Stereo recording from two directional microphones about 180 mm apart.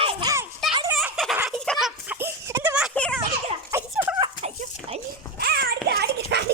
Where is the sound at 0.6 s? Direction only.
Centre (ahead or behind).